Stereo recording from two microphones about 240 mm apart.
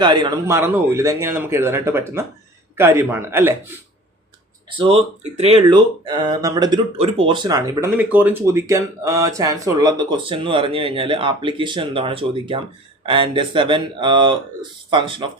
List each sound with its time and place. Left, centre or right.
0.0 s speech: centre
4.8 s speech: right